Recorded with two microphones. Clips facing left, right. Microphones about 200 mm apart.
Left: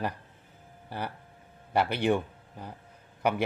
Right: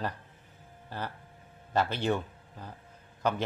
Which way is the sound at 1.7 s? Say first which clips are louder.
Left 3 dB; 15° left (ahead or behind).